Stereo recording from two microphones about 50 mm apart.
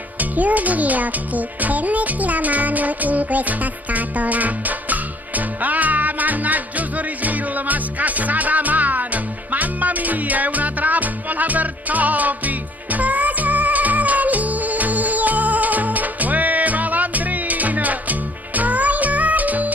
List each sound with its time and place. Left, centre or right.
0.2 s music: right